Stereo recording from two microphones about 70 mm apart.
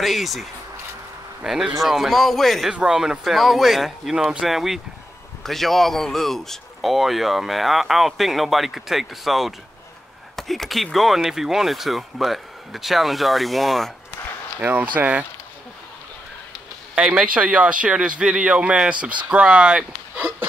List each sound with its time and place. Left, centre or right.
0.0 s a man's voice: centre
2.7 s a man's voice: centre
14.6 s speech: right
16.9 s speech: centre